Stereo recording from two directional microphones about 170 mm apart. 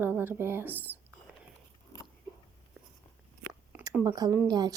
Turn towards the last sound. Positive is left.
turn(degrees=-25)  # may be behind; listen again after turning